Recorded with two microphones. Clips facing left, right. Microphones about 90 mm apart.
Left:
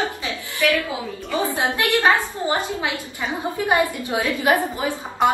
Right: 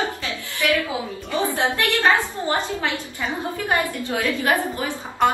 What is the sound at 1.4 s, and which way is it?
A woman's voice, 20° left (ahead or behind).